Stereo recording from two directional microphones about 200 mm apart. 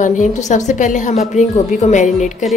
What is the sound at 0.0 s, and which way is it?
A woman's voice, 40° left (ahead or behind).